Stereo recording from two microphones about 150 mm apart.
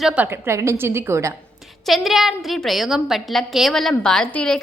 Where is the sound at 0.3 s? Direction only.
20° right (ahead or behind).